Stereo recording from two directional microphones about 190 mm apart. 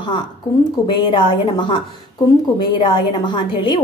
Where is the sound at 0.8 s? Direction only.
25° left (ahead or behind).